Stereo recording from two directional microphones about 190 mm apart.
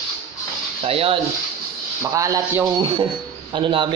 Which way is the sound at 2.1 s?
15° right (ahead or behind).